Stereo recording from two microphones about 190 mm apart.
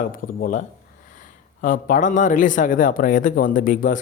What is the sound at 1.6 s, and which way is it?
Speech, 45° left (ahead or behind).